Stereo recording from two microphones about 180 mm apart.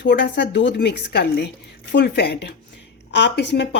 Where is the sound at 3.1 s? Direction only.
75° left (ahead or behind).